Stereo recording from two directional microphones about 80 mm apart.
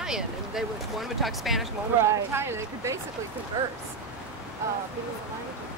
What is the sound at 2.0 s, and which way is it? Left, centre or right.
Speech, right.